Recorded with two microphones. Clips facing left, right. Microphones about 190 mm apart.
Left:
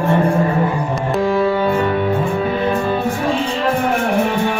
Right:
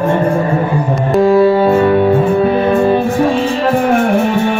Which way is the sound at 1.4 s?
35° right (ahead or behind).